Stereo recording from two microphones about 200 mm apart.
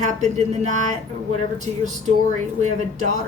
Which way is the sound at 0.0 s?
35° right (ahead or behind).